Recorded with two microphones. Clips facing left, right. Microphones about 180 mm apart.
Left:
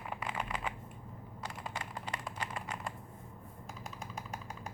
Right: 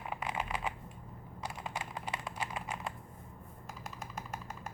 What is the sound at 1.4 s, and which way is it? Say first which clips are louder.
Computer keyboard: right 2 dB; 10° right (ahead or behind).